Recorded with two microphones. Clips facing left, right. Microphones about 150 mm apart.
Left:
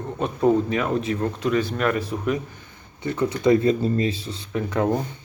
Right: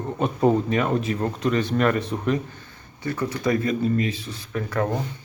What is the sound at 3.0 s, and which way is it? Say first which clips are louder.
Speech: left 4 dB; 20° left (ahead or behind).